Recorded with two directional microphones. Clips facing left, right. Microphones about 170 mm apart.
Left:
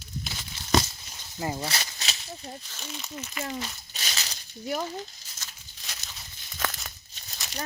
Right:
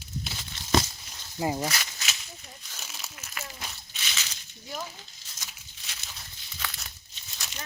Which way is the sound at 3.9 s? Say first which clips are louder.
Left 2 dB; 40° left (ahead or behind).